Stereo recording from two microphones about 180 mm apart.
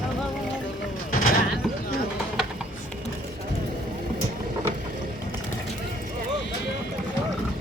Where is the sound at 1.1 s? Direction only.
45° left (ahead or behind).